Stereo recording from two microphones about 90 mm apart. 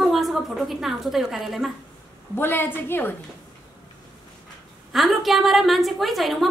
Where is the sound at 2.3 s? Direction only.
25° left (ahead or behind).